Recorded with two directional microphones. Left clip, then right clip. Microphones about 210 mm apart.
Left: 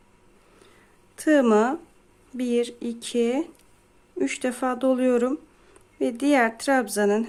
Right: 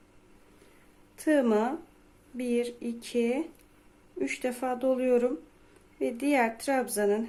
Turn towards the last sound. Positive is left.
turn(degrees=30)  # may be behind; listen again after turning